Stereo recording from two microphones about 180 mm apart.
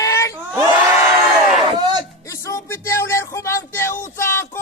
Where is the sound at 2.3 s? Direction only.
15° left (ahead or behind).